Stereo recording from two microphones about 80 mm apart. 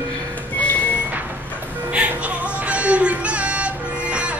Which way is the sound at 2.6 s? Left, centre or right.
Centre.